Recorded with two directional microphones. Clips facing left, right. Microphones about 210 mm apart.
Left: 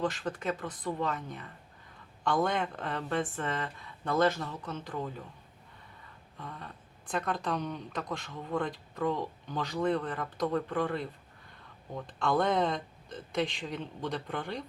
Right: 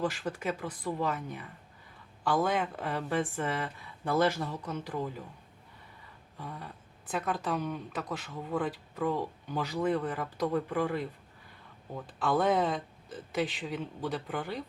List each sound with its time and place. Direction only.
0.0 s speech: 10° right (ahead or behind)
6.3 s speech: 10° right (ahead or behind)